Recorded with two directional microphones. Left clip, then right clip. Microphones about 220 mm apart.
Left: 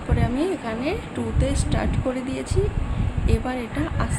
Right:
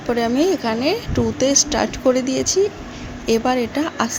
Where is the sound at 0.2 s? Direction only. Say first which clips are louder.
Right 6 dB; 30° right (ahead or behind).